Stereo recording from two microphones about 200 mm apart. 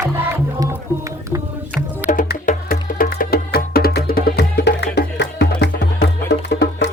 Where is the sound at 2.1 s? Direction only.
40° left (ahead or behind).